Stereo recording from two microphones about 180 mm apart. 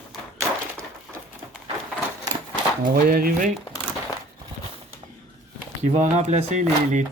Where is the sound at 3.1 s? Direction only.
50° right (ahead or behind).